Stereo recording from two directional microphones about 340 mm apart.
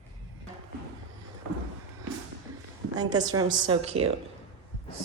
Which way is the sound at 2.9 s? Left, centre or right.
Centre.